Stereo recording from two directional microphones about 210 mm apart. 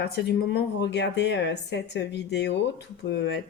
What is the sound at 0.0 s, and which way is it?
Speech, 50° left (ahead or behind).